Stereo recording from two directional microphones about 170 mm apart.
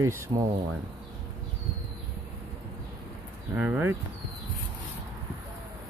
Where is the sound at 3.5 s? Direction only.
10° right (ahead or behind).